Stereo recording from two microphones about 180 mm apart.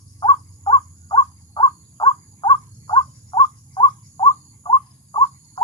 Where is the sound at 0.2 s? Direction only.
25° left (ahead or behind).